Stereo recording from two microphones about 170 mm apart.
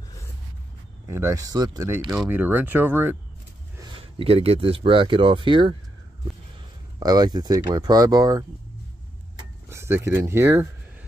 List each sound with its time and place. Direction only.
1.0 s speech: 15° right (ahead or behind)
2.2 s speech: 10° right (ahead or behind)
3.7 s speech: 25° right (ahead or behind)
7.0 s speech: 25° right (ahead or behind)
9.7 s speech: 15° right (ahead or behind)